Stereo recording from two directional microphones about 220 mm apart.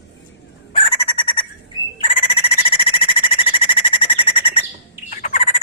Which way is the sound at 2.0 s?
25° left (ahead or behind).